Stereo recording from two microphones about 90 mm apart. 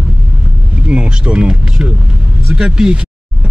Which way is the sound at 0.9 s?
10° right (ahead or behind).